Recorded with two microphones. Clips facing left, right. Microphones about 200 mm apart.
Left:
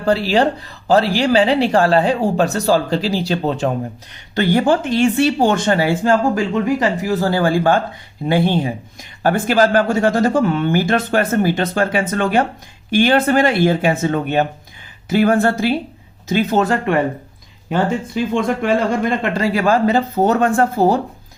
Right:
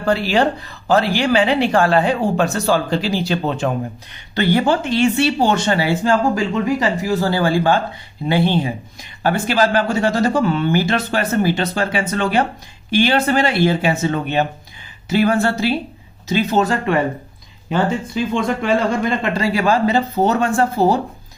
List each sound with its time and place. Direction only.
0.0 s speech: 35° left (ahead or behind); by 21.0 s 50° left (ahead or behind)